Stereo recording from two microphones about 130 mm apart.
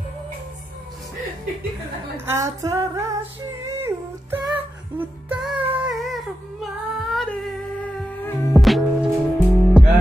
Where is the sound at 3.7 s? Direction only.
20° right (ahead or behind).